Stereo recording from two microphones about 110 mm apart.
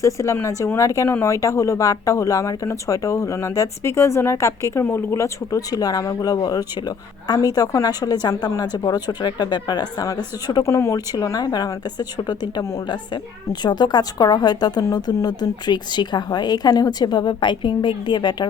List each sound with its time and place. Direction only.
0.0 s a woman's voice: 30° left (ahead or behind)